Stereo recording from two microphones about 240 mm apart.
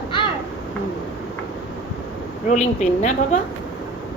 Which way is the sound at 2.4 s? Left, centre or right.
Left.